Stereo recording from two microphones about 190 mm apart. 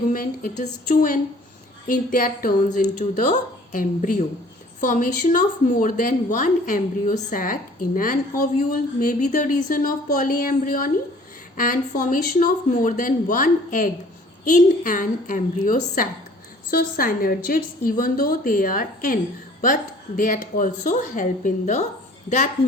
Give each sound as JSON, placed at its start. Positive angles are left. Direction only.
{"t": 0.1, "sound": "a woman's voice", "side_deg": 45}